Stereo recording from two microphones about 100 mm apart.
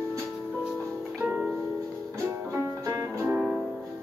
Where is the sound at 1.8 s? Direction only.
30° right (ahead or behind).